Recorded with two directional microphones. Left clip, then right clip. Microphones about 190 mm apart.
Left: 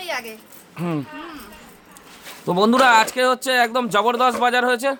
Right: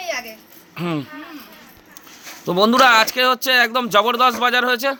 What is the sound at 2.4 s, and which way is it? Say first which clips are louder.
Speech: right 2 dB; 10° left (ahead or behind).